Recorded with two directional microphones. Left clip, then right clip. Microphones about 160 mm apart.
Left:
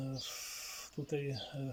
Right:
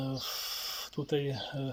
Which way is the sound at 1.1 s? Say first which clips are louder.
Right 7 dB; centre (ahead or behind).